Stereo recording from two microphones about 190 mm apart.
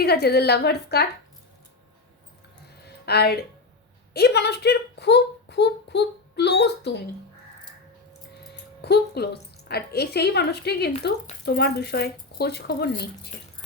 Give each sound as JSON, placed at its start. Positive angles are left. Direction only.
{"t": 0.0, "sound": "speech", "side_deg": 55}
{"t": 3.1, "sound": "speech", "side_deg": 55}
{"t": 8.8, "sound": "speech", "side_deg": 60}